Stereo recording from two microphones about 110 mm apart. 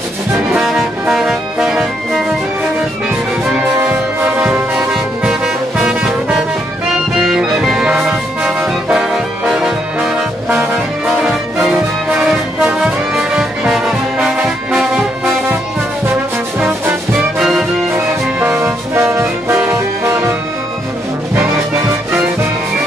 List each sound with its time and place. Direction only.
0.6 s music: 5° right (ahead or behind)
3.5 s brass instrument: 10° right (ahead or behind)
11.1 s music: 10° right (ahead or behind)
17.4 s brass instrument: 5° right (ahead or behind)
18.4 s brass instrument: 20° right (ahead or behind)